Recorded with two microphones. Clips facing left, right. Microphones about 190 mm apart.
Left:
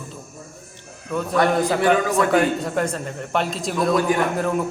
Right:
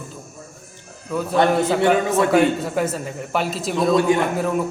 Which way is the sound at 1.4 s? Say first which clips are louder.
Right 2 dB; 25° right (ahead or behind).